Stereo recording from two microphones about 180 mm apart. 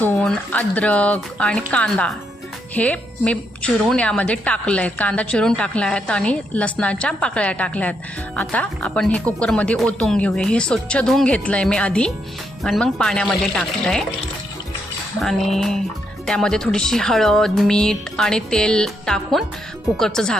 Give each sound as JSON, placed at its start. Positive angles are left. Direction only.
{"t": 0.0, "sound": "a woman's voice", "side_deg": 5}
{"t": 15.2, "sound": "speech", "side_deg": 0}